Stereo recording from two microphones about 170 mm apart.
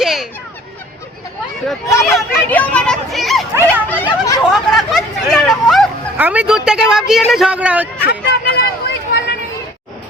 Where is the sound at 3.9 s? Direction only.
15° left (ahead or behind).